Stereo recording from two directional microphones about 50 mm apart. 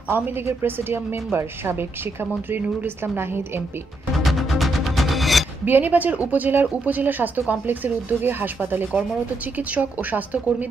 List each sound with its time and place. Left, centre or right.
0.1 s a woman's voice: right
4.2 s music: centre
5.7 s speech: right